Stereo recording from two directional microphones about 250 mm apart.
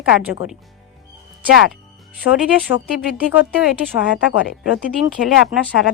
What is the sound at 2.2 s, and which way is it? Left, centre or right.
Speech, left.